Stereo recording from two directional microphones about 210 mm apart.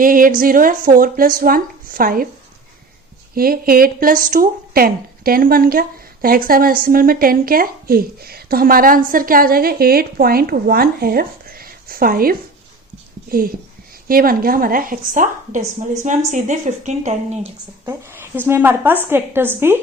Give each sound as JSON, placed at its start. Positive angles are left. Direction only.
{"t": 0.0, "sound": "a woman's voice", "side_deg": -40}
{"t": 3.3, "sound": "a woman's voice", "side_deg": -45}
{"t": 14.1, "sound": "a woman's voice", "side_deg": -45}
{"t": 17.8, "sound": "a woman's voice", "side_deg": -10}